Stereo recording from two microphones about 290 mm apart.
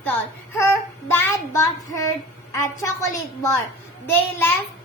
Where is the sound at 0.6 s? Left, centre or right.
Centre.